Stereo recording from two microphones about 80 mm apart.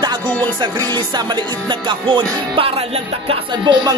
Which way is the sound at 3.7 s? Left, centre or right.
Right.